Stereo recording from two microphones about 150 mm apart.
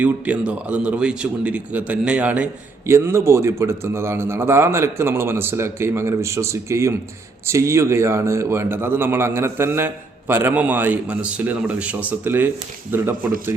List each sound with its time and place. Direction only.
0.0 s a man's voice: 10° right (ahead or behind)